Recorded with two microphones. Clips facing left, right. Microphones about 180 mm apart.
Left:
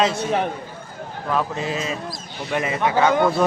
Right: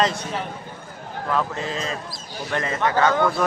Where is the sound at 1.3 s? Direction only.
15° left (ahead or behind).